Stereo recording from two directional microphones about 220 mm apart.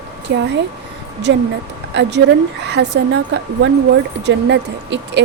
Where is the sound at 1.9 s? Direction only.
55° right (ahead or behind).